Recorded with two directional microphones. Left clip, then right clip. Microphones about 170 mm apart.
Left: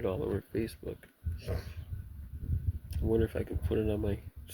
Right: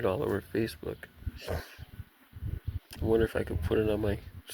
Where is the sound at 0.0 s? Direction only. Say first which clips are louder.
Right 4 dB; 50° right (ahead or behind).